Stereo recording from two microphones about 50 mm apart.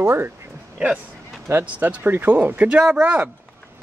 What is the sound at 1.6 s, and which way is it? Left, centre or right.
Speech, right.